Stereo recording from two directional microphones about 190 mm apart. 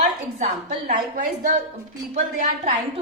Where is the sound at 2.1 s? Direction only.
40° right (ahead or behind).